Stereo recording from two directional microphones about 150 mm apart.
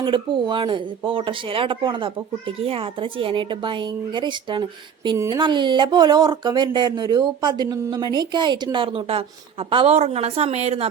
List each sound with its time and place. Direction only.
0.0 s speech: 30° right (ahead or behind)
5.1 s speech: 20° right (ahead or behind)
5.4 s speech: 30° right (ahead or behind)